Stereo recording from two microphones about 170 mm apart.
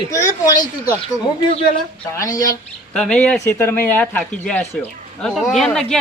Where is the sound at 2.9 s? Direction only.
5° left (ahead or behind).